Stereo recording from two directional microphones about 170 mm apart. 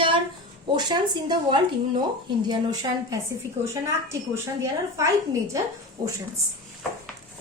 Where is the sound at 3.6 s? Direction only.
45° right (ahead or behind).